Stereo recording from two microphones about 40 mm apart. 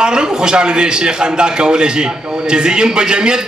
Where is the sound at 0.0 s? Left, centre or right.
Centre.